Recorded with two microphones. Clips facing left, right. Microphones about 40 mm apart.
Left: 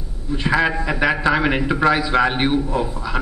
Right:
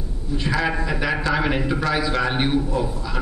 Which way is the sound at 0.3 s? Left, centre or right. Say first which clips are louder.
Left 4 dB; left.